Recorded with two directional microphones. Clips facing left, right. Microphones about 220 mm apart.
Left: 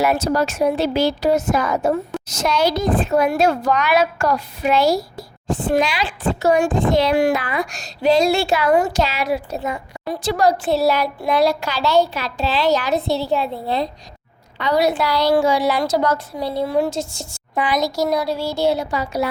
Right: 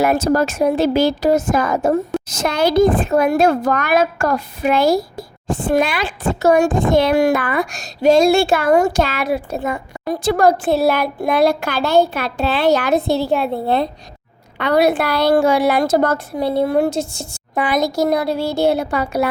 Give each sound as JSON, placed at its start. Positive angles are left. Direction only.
{"t": 0.0, "sound": "a woman's voice", "side_deg": -50}
{"t": 3.1, "sound": "a woman's voice", "side_deg": -50}